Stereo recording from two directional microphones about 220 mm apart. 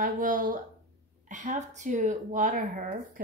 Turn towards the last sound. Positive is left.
turn(degrees=-35)  # may be behind; listen again after turning